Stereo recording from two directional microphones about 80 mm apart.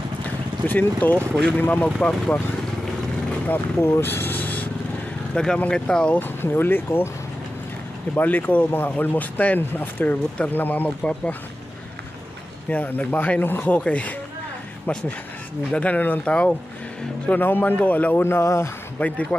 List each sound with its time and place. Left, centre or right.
0.7 s speech: left
3.8 s speech: left
5.3 s speech: centre
6.1 s speech: left
8.2 s speech: left
12.6 s speech: centre
17.3 s speech: left
18.9 s speech: centre